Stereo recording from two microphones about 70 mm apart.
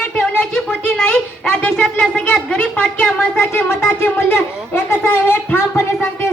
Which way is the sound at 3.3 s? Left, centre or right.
Left.